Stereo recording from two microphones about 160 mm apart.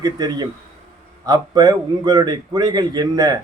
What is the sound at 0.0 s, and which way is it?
A man's voice, 25° right (ahead or behind).